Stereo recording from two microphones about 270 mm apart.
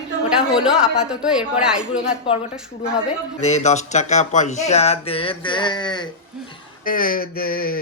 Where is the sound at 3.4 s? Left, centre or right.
Left.